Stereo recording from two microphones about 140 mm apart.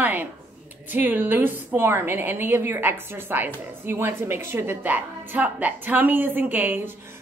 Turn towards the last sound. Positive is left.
turn(degrees=-15)  # may be behind; listen again after turning